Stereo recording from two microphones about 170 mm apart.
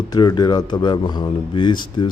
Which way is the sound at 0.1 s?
25° left (ahead or behind).